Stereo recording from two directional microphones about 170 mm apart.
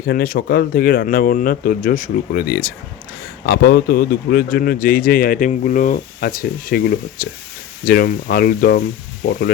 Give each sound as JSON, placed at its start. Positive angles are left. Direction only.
{"t": 0.0, "sound": "speech", "side_deg": 60}